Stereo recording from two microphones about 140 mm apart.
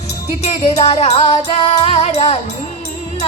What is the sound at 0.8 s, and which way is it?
Music, 50° left (ahead or behind).